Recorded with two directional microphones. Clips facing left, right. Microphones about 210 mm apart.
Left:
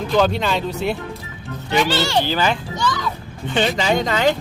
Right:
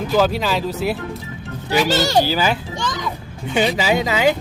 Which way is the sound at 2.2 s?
10° right (ahead or behind).